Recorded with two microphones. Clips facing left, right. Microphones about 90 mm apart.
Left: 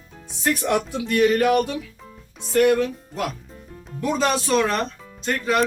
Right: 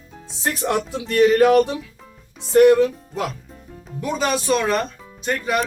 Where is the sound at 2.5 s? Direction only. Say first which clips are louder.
Right 5 dB; 25° right (ahead or behind).